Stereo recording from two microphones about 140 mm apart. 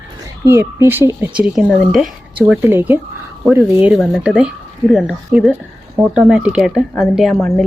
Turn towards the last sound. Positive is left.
turn(degrees=0)  # may be behind; listen again after turning